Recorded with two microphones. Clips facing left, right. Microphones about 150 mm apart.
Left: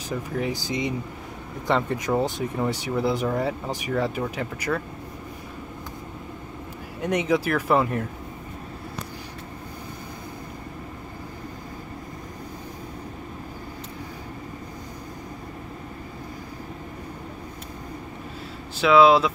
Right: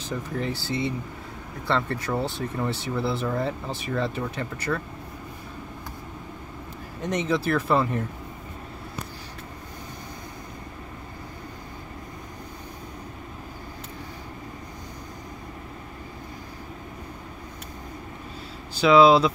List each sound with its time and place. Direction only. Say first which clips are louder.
0.4 s speech: left 1 dB; 15° left (ahead or behind)
7.0 s speech: left 3 dB; 10° left (ahead or behind)
18.8 s speech: even; centre (ahead or behind)